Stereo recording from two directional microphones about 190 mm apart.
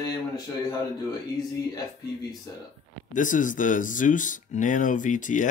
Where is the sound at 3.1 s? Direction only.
45° left (ahead or behind).